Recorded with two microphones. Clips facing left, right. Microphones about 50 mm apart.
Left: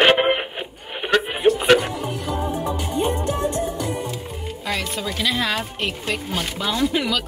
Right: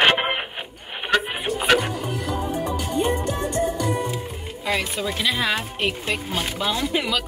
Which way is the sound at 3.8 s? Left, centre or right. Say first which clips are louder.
Right 2 dB; centre.